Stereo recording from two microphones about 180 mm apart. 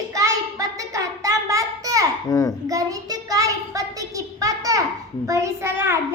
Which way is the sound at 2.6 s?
20° right (ahead or behind).